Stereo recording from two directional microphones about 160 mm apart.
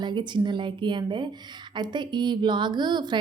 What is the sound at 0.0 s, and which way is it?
Speech, 30° right (ahead or behind).